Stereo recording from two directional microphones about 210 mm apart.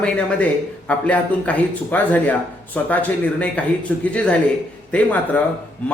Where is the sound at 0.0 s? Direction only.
5° left (ahead or behind).